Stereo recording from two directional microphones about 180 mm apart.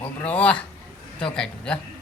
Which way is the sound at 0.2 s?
5° left (ahead or behind).